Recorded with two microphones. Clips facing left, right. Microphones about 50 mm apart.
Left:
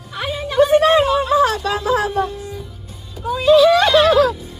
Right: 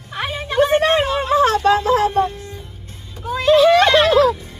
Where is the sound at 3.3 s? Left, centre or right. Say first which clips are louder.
Left 1 dB; right.